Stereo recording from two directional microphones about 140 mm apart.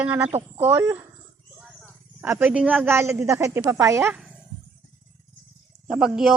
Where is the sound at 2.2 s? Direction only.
15° right (ahead or behind).